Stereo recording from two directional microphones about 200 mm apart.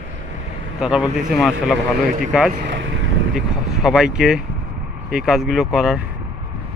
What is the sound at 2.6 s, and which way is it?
Speech, 65° right (ahead or behind).